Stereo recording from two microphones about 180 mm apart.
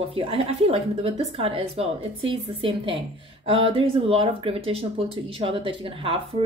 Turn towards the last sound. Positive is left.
turn(degrees=-30)  # may be behind; listen again after turning